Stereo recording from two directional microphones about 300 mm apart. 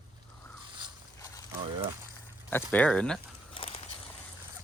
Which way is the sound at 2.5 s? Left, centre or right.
Centre.